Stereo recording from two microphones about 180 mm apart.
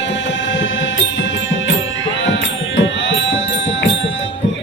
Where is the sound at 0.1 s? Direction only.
80° left.